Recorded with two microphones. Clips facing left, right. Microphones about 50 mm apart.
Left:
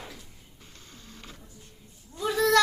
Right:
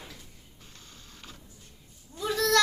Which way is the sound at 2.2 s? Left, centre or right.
Centre.